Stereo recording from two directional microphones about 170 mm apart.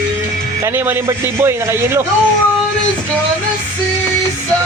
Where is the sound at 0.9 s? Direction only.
15° right (ahead or behind).